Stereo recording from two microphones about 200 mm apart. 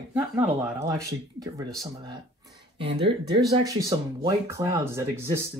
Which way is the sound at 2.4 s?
25° right (ahead or behind).